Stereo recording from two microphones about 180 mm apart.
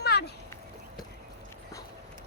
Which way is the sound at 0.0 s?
65° left (ahead or behind).